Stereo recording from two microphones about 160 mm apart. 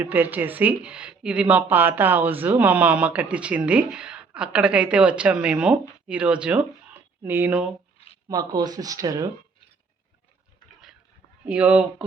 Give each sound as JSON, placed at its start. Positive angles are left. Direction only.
{"t": 0.0, "sound": "speech", "side_deg": -10}
{"t": 8.3, "sound": "speech", "side_deg": -25}
{"t": 11.4, "sound": "speech", "side_deg": -10}